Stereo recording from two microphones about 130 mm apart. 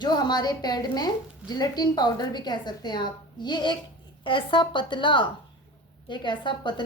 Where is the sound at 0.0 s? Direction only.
35° left (ahead or behind).